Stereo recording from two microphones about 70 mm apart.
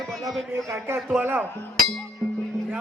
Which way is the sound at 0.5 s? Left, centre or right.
Right.